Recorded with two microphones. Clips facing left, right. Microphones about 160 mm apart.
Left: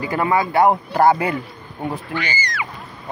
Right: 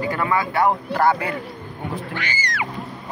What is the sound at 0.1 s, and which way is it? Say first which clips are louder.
Speech: left 7 dB; 20° left (ahead or behind).